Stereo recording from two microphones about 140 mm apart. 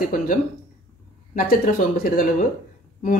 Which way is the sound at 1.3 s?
90° left.